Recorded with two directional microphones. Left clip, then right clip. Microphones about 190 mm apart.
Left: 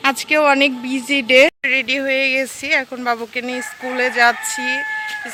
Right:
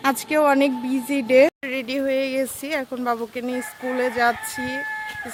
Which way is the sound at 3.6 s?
15° left (ahead or behind).